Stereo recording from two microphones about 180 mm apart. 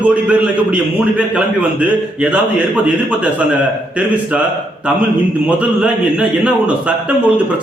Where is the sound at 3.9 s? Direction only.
5° right (ahead or behind).